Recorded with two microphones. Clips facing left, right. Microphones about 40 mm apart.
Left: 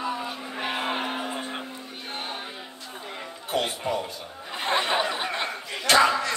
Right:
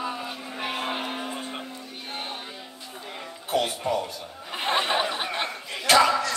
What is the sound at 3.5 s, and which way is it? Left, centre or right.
Music, centre.